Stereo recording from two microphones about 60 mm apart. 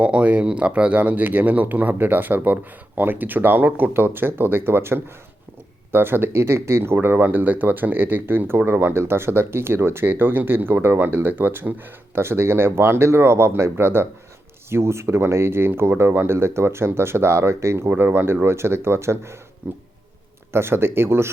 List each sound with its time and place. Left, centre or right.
0.0 s speech: right
12.1 s speech: right
17.8 s speech: right